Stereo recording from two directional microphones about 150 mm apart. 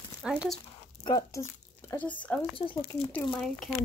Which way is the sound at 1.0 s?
25° left (ahead or behind).